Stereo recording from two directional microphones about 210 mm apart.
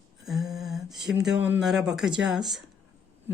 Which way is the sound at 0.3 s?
Centre (ahead or behind).